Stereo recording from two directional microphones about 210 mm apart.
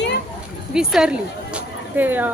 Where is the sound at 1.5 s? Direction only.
10° right (ahead or behind).